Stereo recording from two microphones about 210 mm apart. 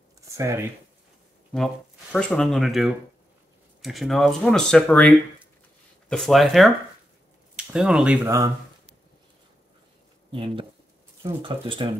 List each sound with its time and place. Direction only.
0.2 s a sound: 15° right (ahead or behind)
2.1 s speech: 5° left (ahead or behind); by 8.5 s 10° right (ahead or behind)
10.3 s speech: 25° right (ahead or behind)